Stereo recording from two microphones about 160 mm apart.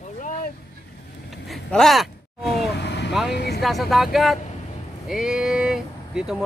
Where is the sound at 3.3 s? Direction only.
90° left.